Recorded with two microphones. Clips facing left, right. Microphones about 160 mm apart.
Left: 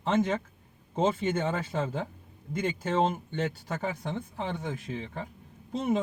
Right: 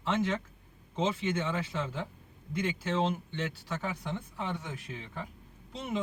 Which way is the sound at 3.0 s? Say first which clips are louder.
Left 6 dB; 50° left (ahead or behind).